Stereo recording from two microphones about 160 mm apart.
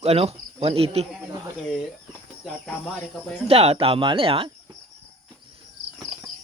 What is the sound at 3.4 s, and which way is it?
Speech, 40° right (ahead or behind).